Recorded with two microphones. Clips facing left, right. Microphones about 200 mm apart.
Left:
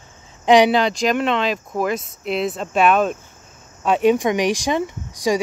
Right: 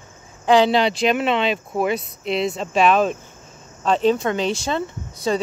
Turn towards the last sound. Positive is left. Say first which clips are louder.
# left 2 dB
turn(degrees=15)  # may be behind; listen again after turning